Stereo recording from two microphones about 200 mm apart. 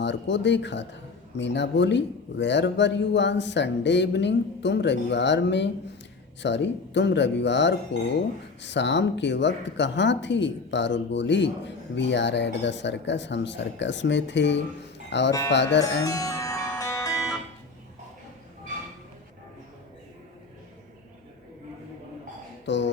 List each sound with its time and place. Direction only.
0.0 s speech: 60° left (ahead or behind)
15.8 s music: 15° left (ahead or behind)
22.6 s speech: 60° left (ahead or behind)